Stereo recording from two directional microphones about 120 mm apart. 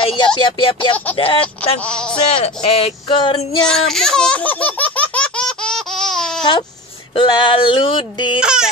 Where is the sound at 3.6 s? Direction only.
5° left (ahead or behind).